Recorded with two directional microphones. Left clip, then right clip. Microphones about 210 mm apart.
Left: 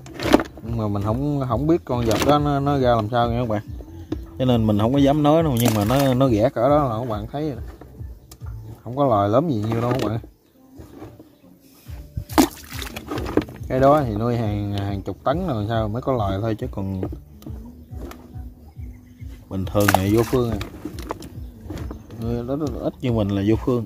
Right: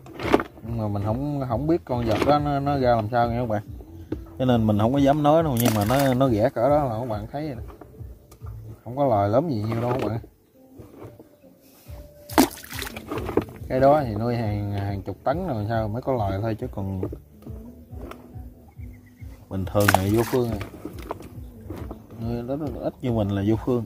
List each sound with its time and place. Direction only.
0.2 s speech: 15° left (ahead or behind)
8.9 s speech: 5° left (ahead or behind)
12.3 s a sound: 15° right (ahead or behind)
12.9 s speech: 10° left (ahead or behind)
19.5 s speech: 5° left (ahead or behind)
20.2 s speech: 15° right (ahead or behind)
20.4 s a sound: 10° left (ahead or behind)
22.2 s speech: 10° left (ahead or behind)